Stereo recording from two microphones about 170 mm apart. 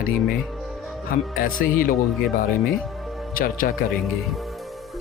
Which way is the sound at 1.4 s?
60° left (ahead or behind).